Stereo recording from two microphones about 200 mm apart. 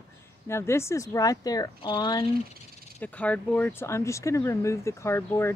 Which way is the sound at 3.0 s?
5° left (ahead or behind).